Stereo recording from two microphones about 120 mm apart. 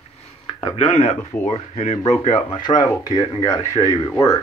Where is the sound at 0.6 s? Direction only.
65° left (ahead or behind).